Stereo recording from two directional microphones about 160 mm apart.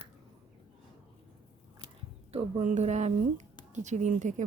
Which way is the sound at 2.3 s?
40° right (ahead or behind).